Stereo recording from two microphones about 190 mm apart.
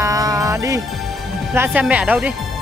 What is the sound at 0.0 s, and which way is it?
Music, 20° right (ahead or behind).